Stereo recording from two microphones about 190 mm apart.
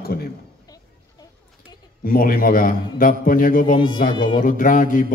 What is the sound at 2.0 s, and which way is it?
A man's voice, 50° left (ahead or behind).